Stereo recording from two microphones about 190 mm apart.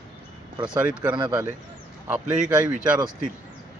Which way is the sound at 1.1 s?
25° right (ahead or behind).